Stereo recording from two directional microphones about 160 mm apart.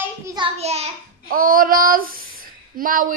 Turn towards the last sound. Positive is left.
turn(degrees=-60)  # may be behind; listen again after turning